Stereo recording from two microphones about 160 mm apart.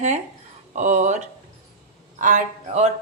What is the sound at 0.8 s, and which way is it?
Speech, 50° right (ahead or behind).